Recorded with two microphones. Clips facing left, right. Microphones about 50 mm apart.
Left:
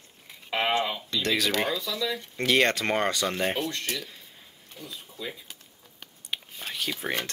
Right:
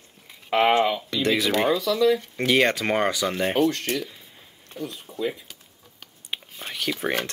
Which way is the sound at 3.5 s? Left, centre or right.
Right.